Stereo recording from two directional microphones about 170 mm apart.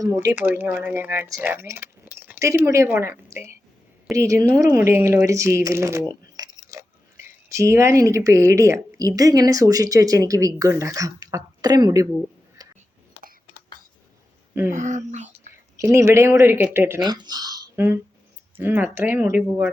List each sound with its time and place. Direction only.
0.0 s speech: 20° right (ahead or behind)
12.6 s a sound: 20° right (ahead or behind)
14.7 s speech: 45° right (ahead or behind)
15.8 s speech: 15° right (ahead or behind)
17.0 s speech: 25° right (ahead or behind); by 19.7 s 5° right (ahead or behind)